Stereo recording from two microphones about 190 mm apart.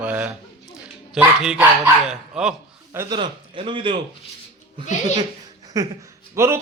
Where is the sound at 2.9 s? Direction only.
15° right (ahead or behind).